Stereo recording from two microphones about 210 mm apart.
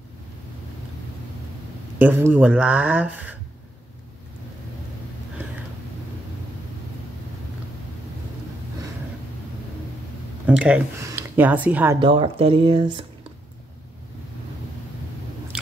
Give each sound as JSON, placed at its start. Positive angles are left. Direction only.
{"t": 2.0, "sound": "speech", "side_deg": -10}
{"t": 10.4, "sound": "speech", "side_deg": -5}
{"t": 12.0, "sound": "speech", "side_deg": -25}